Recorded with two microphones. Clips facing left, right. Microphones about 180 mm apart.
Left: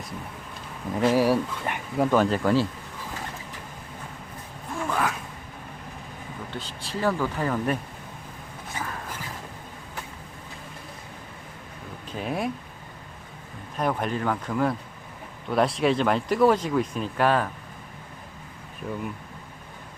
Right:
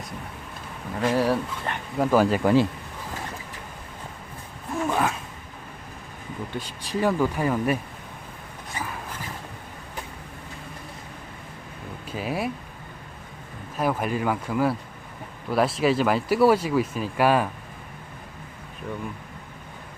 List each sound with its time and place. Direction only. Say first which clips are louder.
1.0 s speech: left 2 dB; 10° left (ahead or behind)
2.0 s speech: right 1 dB; 5° right (ahead or behind)
4.9 s a sound: right 2 dB; 25° right (ahead or behind)
6.5 s speech: right 4 dB; 15° right (ahead or behind)
8.7 s a sound: right 1 dB; centre (ahead or behind)
12.1 s speech: right 1 dB; 5° right (ahead or behind)
13.7 s speech: right 1 dB; 5° right (ahead or behind)